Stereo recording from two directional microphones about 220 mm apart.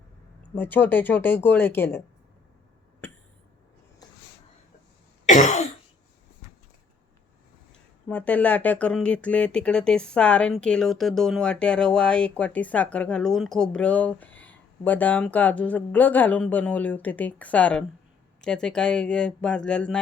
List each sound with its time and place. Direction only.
0.5 s speech: 10° left (ahead or behind)
5.2 s cough: 35° left (ahead or behind)
8.0 s speech: 5° left (ahead or behind)